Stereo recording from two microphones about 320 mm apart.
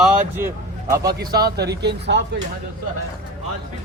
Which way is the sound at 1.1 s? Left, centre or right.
Right.